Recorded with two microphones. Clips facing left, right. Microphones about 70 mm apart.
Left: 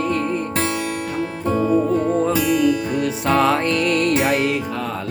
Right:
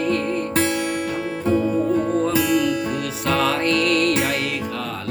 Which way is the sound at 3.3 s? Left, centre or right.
Left.